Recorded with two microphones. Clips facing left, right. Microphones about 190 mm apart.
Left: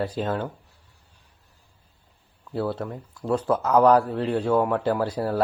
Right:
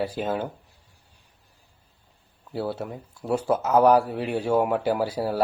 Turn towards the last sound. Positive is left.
turn(degrees=-5)  # may be behind; listen again after turning